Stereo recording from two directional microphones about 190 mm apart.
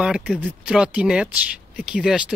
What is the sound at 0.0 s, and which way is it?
Speech, 5° right (ahead or behind).